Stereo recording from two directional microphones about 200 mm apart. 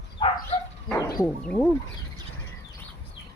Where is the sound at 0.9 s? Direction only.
20° left (ahead or behind).